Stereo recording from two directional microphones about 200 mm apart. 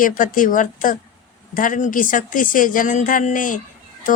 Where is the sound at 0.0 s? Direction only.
45° left (ahead or behind).